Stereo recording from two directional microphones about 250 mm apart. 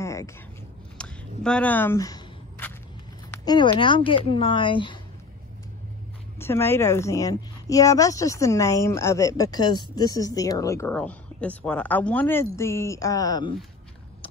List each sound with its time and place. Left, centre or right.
0.0 s a sound: centre
3.4 s speech: centre
6.4 s speech: centre